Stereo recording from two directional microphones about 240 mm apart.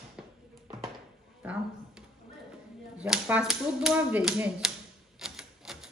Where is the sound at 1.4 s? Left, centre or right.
Centre.